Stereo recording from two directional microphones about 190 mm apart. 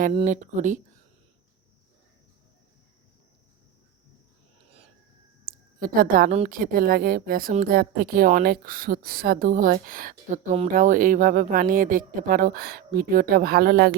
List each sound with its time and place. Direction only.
0.3 s speech: 40° right (ahead or behind)
5.5 s a sound: 50° right (ahead or behind)
6.5 s a woman's voice: 50° right (ahead or behind)